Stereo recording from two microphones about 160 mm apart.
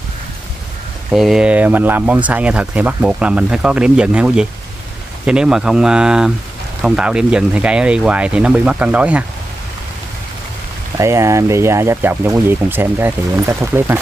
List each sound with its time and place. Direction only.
1.1 s speech: 5° right (ahead or behind)
11.0 s speech: 20° right (ahead or behind)